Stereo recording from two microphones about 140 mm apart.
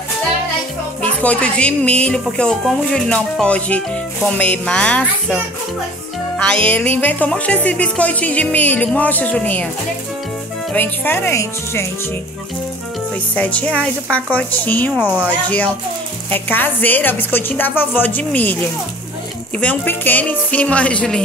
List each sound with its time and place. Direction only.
1.0 s music: 10° left (ahead or behind)
6.3 s music: 5° left (ahead or behind)
10.7 s music: 15° left (ahead or behind)
13.3 s music: 10° left (ahead or behind)
15.0 s speech: 10° right (ahead or behind)
15.4 s music: 10° left (ahead or behind)
19.6 s music: 10° left (ahead or behind)